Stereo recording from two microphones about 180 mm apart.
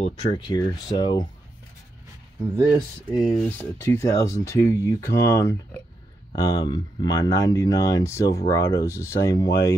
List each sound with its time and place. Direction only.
0.0 s speech: 25° left (ahead or behind)
2.4 s speech: 10° right (ahead or behind); by 9.7 s 20° left (ahead or behind)